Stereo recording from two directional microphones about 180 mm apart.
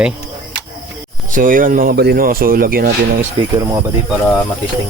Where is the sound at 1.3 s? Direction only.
50° right (ahead or behind).